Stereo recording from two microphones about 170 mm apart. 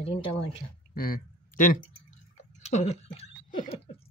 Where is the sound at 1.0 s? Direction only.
55° left (ahead or behind).